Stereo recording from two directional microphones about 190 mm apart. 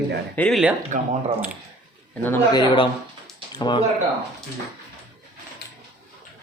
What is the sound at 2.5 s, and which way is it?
Speech, 20° left (ahead or behind).